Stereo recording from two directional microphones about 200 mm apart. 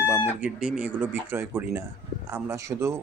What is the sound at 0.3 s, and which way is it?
Speech, 5° right (ahead or behind).